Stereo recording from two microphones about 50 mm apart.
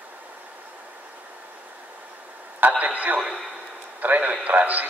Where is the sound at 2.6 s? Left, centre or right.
Right.